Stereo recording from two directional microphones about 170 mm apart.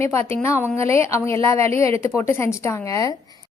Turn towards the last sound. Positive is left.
turn(degrees=20)  # may be behind; listen again after turning